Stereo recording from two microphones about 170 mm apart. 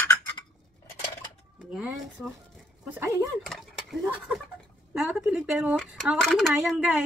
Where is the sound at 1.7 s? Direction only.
5° right (ahead or behind).